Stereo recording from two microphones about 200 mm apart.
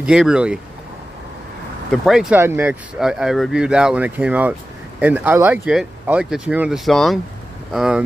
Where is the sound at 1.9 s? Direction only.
Centre (ahead or behind).